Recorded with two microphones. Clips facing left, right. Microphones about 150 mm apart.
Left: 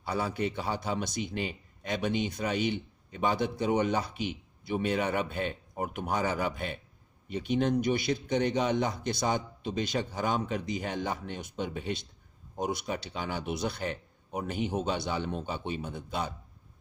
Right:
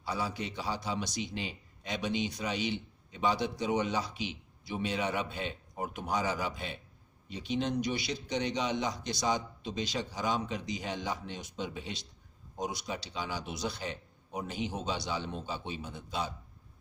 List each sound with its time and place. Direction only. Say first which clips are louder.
0.0 s a man's voice: left 4 dB; 55° left (ahead or behind)